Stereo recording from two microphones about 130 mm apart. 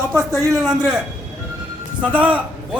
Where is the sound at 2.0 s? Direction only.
10° right (ahead or behind).